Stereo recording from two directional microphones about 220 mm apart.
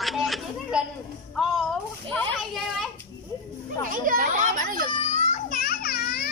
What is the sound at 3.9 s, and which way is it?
Children playing, 40° right (ahead or behind).